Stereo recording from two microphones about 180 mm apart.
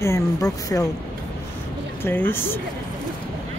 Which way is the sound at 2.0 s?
10° left (ahead or behind).